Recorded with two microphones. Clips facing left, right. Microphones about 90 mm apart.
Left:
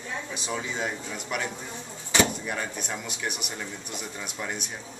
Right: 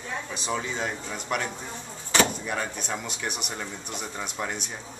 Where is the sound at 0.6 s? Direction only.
5° left (ahead or behind).